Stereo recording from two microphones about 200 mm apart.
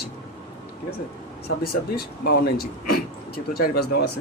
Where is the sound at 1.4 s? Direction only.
50° left (ahead or behind).